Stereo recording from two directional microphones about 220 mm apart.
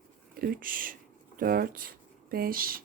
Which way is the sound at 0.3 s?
40° right (ahead or behind).